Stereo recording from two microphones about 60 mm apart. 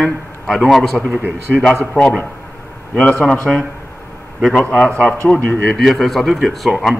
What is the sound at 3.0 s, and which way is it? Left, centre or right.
Speech, left.